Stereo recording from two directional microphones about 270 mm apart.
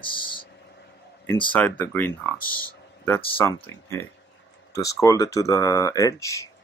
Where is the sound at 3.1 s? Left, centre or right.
Centre.